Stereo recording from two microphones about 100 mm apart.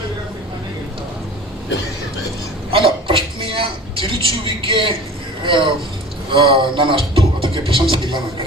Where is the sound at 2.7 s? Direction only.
60° right (ahead or behind).